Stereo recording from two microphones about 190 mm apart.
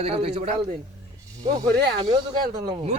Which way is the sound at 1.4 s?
20° right (ahead or behind).